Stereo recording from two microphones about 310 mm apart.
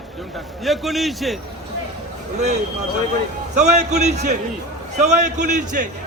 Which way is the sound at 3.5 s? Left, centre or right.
Right.